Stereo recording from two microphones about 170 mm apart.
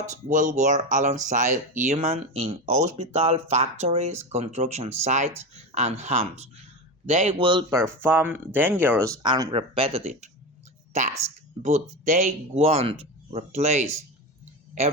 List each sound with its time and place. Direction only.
0.0 s speech: 50° right (ahead or behind)
7.4 s speech: 30° right (ahead or behind)
8.0 s a woman's voice: 10° right (ahead or behind); by 13.8 s 40° right (ahead or behind)